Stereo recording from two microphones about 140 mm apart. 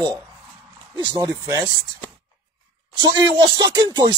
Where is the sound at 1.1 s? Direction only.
25° right (ahead or behind).